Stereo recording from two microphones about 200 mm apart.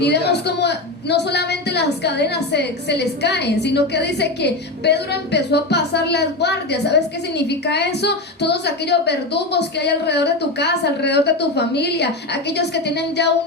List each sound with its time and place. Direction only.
0.0 s a woman's voice: 55° left (ahead or behind)